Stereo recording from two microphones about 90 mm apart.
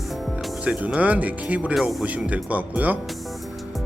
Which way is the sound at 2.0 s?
15° right (ahead or behind).